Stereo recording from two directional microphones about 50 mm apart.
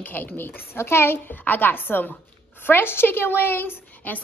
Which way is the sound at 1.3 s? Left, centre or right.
Left.